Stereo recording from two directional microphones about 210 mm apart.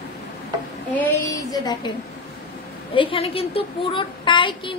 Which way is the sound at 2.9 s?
25° left (ahead or behind).